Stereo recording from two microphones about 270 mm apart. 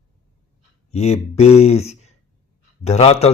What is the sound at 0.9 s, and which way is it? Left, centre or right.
Speech, left.